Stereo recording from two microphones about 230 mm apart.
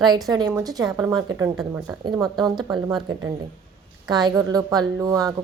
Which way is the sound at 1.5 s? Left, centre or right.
Centre.